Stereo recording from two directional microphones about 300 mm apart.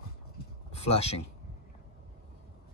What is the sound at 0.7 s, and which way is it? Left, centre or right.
Speech, left.